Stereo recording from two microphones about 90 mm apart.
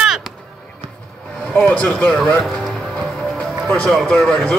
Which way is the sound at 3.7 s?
5° left (ahead or behind).